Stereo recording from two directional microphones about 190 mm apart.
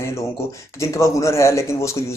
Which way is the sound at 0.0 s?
15° left (ahead or behind).